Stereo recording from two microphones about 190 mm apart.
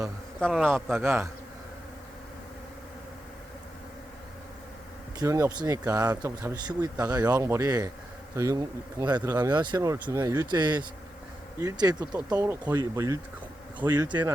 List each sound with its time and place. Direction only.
0.3 s a man's voice: centre (ahead or behind)
0.7 s speech: 10° right (ahead or behind)
5.2 s speech: 15° right (ahead or behind)